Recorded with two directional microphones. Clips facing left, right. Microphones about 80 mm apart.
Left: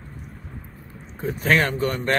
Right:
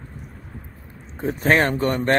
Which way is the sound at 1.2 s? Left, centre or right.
Right.